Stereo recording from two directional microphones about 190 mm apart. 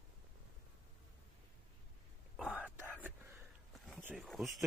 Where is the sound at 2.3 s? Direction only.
5° right (ahead or behind).